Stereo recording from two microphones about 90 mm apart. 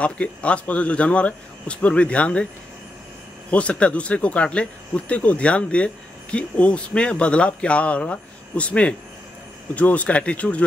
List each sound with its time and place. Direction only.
0.0 s speech: 15° left (ahead or behind)
3.4 s speech: 15° left (ahead or behind)